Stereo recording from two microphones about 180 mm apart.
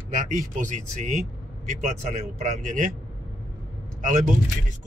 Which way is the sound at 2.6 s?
45° right (ahead or behind).